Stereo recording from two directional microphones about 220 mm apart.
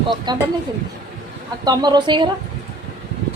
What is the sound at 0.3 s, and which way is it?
Speech, 20° right (ahead or behind).